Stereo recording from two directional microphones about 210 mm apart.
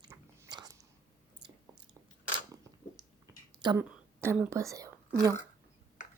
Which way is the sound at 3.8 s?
10° right (ahead or behind).